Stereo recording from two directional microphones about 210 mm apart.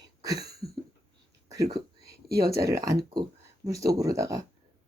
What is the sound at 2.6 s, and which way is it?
Speech, 15° right (ahead or behind).